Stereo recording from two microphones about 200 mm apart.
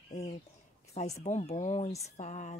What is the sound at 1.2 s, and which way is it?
Speech, 35° left (ahead or behind).